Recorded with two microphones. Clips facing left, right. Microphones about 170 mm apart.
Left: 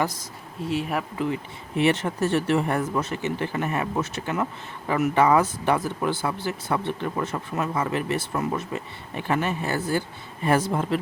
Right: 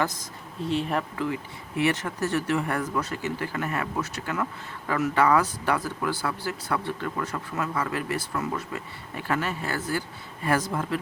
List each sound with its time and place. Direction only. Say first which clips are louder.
0.6 s speech: even; 5° left (ahead or behind)
1.2 s speech: left 2 dB; 25° left (ahead or behind)